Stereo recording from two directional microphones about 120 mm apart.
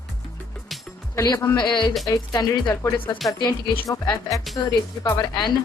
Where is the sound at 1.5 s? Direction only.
40° left (ahead or behind).